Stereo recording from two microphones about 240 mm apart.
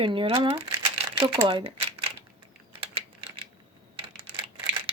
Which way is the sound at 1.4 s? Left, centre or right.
Right.